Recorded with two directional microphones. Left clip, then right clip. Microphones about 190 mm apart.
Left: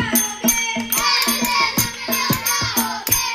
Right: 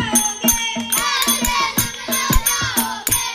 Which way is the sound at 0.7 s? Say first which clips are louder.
Left 1 dB; 15° right (ahead or behind).